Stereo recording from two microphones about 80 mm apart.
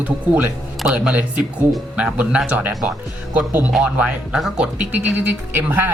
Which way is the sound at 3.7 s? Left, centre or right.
Centre.